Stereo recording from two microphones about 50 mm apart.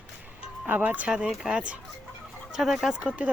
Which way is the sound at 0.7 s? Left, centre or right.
Right.